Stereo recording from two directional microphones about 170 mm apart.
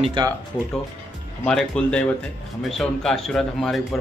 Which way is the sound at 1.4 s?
5° left (ahead or behind).